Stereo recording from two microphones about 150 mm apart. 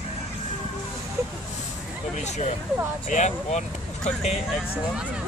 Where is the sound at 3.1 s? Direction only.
50° left (ahead or behind).